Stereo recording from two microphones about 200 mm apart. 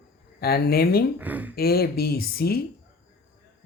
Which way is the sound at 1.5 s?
50° left (ahead or behind).